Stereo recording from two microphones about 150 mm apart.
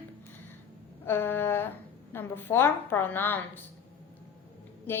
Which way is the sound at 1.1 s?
15° left (ahead or behind).